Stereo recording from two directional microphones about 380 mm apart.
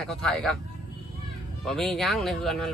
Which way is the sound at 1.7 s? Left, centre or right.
Centre.